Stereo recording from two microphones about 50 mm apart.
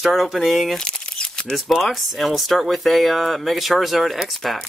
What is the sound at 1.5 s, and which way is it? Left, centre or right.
Speech, centre.